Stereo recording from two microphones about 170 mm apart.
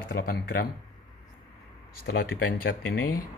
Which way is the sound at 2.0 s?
80° left.